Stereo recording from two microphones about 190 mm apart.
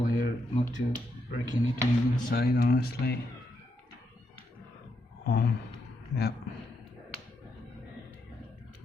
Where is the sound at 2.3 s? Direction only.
55° left (ahead or behind).